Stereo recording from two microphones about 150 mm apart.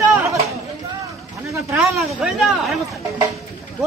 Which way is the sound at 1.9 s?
Centre (ahead or behind).